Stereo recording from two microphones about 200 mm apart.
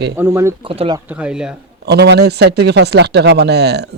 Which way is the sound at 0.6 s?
25° right (ahead or behind).